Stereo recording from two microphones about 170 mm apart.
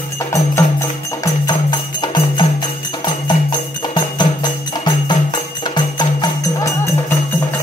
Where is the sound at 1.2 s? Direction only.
25° left (ahead or behind).